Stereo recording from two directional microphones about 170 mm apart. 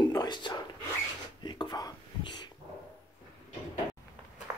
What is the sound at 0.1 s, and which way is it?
Whispering, 25° left (ahead or behind).